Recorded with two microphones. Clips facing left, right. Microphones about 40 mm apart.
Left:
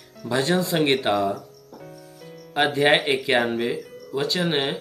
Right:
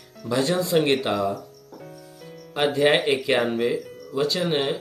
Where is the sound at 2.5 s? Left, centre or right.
Centre.